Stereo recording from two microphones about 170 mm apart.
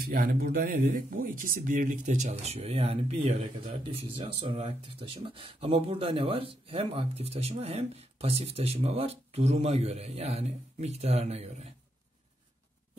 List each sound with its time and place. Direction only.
0.0 s speech: 60° right (ahead or behind); by 11.7 s 40° right (ahead or behind)